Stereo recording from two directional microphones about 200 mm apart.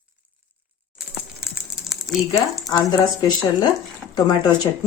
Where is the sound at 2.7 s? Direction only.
20° left (ahead or behind).